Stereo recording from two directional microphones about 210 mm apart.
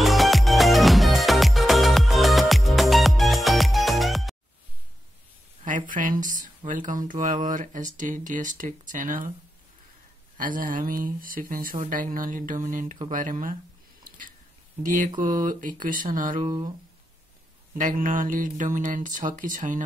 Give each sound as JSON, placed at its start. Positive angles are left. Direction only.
{"t": 0.0, "sound": "music", "side_deg": 0}
{"t": 5.6, "sound": "speech", "side_deg": -40}
{"t": 10.3, "sound": "speech", "side_deg": -40}
{"t": 14.0, "sound": "a sound", "side_deg": -40}
{"t": 15.1, "sound": "speech", "side_deg": -40}
{"t": 16.4, "sound": "speech", "side_deg": -25}
{"t": 17.7, "sound": "speech", "side_deg": -40}